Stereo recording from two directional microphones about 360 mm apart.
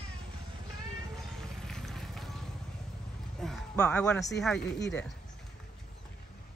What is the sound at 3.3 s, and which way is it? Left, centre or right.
Music, centre.